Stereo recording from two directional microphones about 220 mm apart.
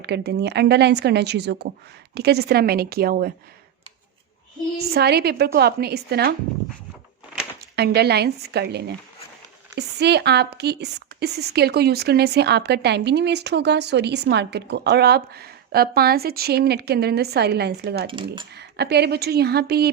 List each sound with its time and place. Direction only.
0.0 s speech: 50° right (ahead or behind)
4.9 s speech: 45° right (ahead or behind)
7.8 s speech: 45° right (ahead or behind)